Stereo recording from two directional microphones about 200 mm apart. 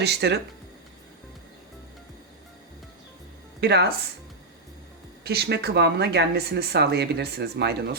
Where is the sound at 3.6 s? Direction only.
55° right (ahead or behind).